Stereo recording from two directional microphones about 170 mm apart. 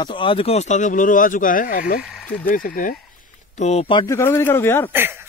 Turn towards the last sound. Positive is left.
turn(degrees=15)  # may be behind; listen again after turning